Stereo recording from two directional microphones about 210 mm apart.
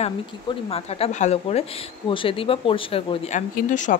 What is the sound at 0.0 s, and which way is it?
Speech, 25° left (ahead or behind).